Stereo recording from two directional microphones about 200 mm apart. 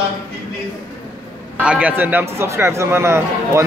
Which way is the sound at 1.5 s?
5° right (ahead or behind).